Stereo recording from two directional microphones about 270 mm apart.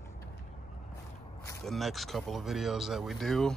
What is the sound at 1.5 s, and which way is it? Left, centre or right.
Speech, centre.